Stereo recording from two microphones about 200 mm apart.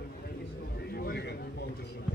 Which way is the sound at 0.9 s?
55° left (ahead or behind).